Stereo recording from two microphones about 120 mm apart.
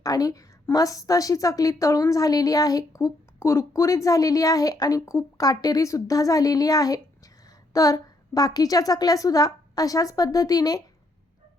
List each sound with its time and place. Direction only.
0.0 s a woman's voice: 30° left (ahead or behind)